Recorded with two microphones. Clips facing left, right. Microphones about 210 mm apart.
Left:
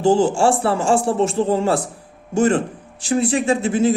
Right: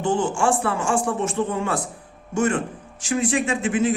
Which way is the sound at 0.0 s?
30° left (ahead or behind).